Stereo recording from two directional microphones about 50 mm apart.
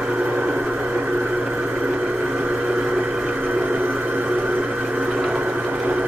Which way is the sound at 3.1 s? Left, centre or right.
Right.